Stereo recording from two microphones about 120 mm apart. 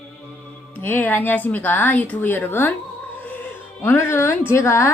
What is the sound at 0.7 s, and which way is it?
Speech, 15° left (ahead or behind).